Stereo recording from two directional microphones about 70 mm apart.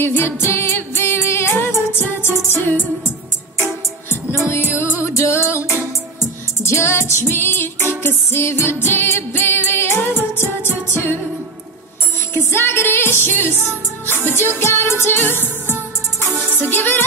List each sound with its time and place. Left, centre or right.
0.0 s music: left
4.5 s music: left
12.4 s music: left
14.6 s music: left